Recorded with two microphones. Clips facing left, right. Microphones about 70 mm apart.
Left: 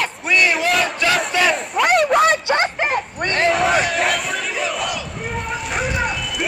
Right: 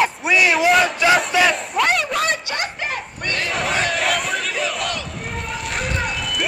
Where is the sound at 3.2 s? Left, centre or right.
Left.